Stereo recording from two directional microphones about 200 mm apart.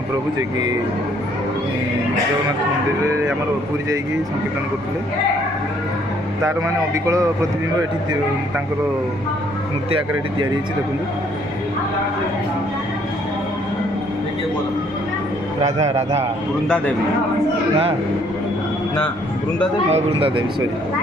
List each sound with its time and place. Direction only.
6.9 s a man's voice: 15° right (ahead or behind)
15.6 s a man's voice: 35° right (ahead or behind)
16.6 s a man's voice: 5° left (ahead or behind)
19.9 s speech: 30° right (ahead or behind)